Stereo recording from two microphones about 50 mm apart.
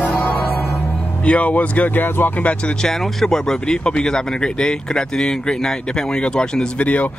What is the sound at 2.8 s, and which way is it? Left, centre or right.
Speech, centre.